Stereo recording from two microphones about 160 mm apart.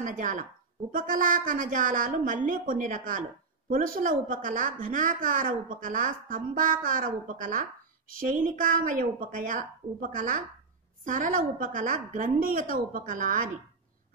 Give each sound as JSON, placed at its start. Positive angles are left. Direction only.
{"t": 0.0, "sound": "a woman's voice", "side_deg": -55}